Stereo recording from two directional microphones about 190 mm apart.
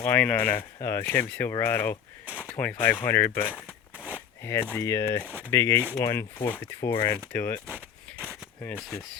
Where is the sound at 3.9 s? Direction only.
5° right (ahead or behind).